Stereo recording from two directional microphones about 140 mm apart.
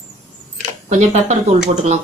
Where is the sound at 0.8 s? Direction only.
55° right (ahead or behind).